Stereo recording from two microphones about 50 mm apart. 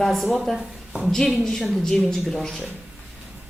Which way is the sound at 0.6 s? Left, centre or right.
Right.